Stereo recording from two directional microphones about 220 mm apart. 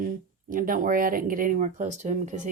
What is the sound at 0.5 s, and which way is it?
Speech, 40° right (ahead or behind).